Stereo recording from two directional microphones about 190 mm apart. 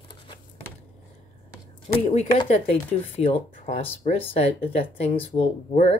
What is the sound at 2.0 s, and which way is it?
Speech, 30° left (ahead or behind).